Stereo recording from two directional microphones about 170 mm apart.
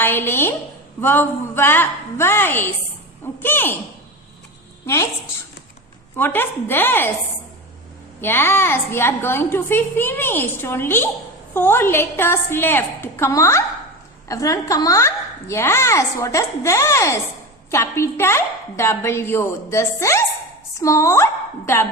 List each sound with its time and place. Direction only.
0.0 s a woman's voice: 10° left (ahead or behind)
6.1 s a woman's voice: 10° left (ahead or behind)
8.2 s a woman's voice: 15° left (ahead or behind)